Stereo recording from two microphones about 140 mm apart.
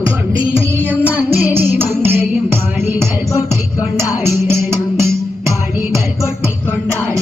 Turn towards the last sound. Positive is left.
turn(degrees=-20)  # may be behind; listen again after turning